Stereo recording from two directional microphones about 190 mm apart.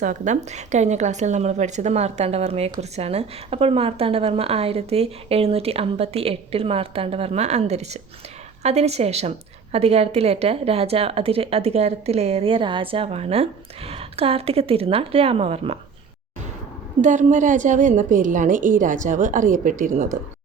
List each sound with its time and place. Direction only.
0.0 s a woman's voice: 40° right (ahead or behind)
17.0 s a woman's voice: 40° right (ahead or behind)